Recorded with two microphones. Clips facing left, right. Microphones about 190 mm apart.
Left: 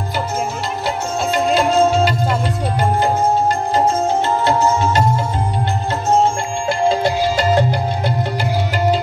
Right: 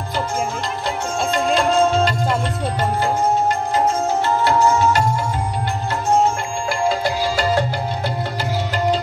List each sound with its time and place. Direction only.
1.3 s music: 5° left (ahead or behind)
4.5 s music: 20° left (ahead or behind)
6.7 s music: 25° left (ahead or behind)